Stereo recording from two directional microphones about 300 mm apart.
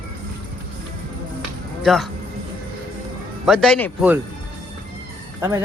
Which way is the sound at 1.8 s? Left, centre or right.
Centre.